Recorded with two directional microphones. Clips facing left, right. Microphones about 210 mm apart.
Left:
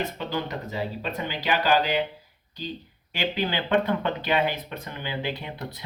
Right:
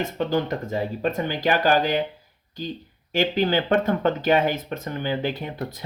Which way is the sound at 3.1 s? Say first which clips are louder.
Right 6 dB; 45° right (ahead or behind).